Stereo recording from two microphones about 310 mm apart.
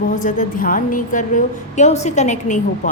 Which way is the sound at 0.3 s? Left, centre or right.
Left.